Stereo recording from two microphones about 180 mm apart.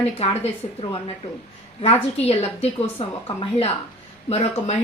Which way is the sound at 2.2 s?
35° left (ahead or behind).